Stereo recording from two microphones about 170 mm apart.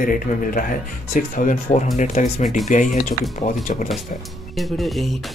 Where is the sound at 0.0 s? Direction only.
55° left (ahead or behind).